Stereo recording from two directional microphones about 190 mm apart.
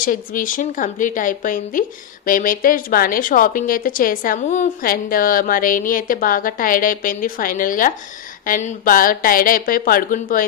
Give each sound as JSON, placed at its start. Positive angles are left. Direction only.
{"t": 0.0, "sound": "a woman's voice", "side_deg": 45}